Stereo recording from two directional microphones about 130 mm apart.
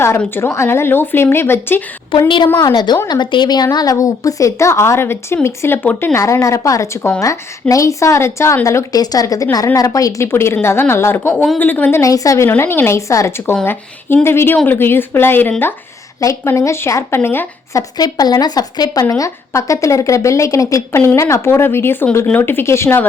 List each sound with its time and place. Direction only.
0.2 s speech: 15° left (ahead or behind)
2.1 s a woman's voice: 40° left (ahead or behind); by 6.1 s 15° left (ahead or behind)
6.1 s speech: 25° left (ahead or behind)
17.9 s speech: 30° left (ahead or behind)